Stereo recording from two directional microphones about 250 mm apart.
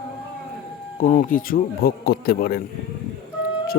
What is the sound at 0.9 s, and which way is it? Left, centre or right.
Speech, left.